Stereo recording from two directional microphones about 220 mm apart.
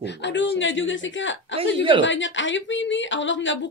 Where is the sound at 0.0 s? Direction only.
55° left (ahead or behind).